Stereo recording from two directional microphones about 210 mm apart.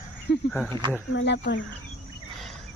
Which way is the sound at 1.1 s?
55° left (ahead or behind).